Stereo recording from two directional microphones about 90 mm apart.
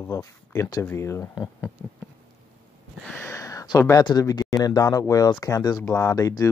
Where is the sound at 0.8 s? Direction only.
30° left (ahead or behind).